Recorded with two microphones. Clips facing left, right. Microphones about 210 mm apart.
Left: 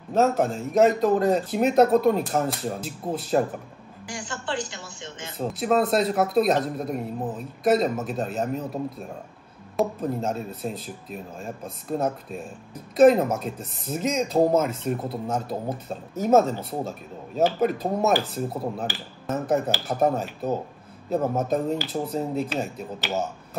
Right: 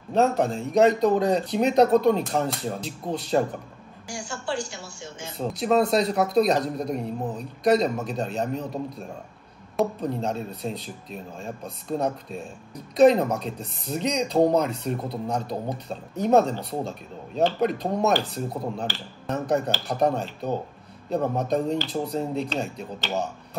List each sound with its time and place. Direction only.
0.1 s speech: centre (ahead or behind)
4.1 s speech: 20° left (ahead or behind)
5.4 s speech: centre (ahead or behind)